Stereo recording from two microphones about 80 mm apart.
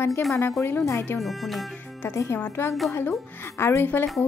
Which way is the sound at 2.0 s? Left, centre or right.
Left.